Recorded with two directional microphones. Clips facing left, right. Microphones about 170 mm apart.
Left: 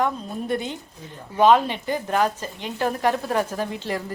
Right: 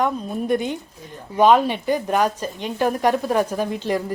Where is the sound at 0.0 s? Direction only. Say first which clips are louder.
Right 3 dB; 15° right (ahead or behind).